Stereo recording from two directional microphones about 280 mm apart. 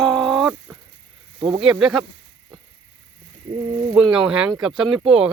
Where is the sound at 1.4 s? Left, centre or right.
Centre.